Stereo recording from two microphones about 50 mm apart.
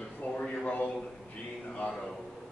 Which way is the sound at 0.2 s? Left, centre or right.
Left.